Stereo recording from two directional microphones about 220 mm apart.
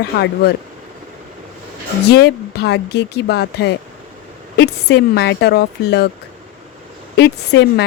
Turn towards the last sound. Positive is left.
turn(degrees=50)  # may be behind; listen again after turning